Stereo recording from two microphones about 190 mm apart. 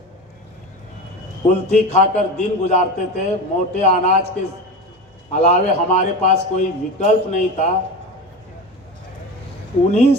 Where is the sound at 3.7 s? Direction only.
35° left (ahead or behind).